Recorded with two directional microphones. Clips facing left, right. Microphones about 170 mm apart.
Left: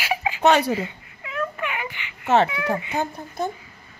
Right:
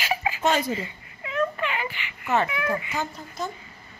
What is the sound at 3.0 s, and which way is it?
Speech, 55° left (ahead or behind).